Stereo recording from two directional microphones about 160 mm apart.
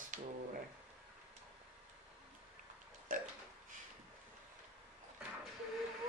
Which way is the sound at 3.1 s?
60° right (ahead or behind).